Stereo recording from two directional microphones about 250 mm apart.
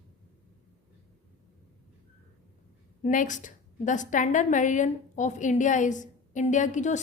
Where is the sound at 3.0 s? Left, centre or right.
Left.